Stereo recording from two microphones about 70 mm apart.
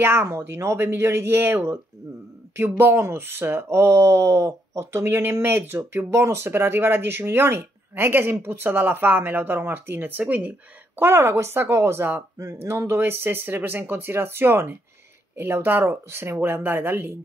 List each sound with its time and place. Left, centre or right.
0.0 s speech: right
11.0 s speech: right